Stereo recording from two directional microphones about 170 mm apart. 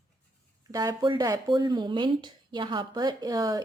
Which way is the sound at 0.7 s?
25° right (ahead or behind).